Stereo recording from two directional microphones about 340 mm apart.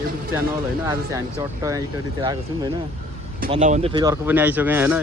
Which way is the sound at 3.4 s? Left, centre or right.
Right.